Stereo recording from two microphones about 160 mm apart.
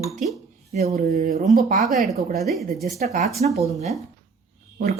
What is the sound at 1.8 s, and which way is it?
Speech, centre (ahead or behind).